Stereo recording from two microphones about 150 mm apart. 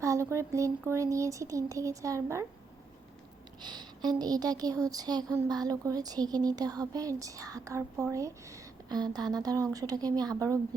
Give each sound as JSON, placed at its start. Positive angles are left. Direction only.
{"t": 0.0, "sound": "speech", "side_deg": -20}
{"t": 3.6, "sound": "speech", "side_deg": -30}